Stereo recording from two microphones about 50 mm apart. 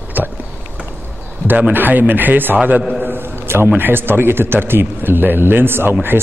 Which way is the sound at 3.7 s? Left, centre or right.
Right.